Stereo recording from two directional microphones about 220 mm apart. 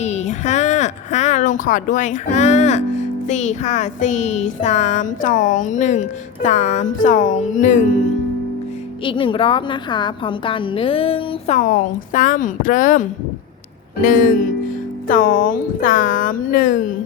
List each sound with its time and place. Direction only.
0.0 s speech: 30° left (ahead or behind)
9.0 s a woman's voice: 25° left (ahead or behind)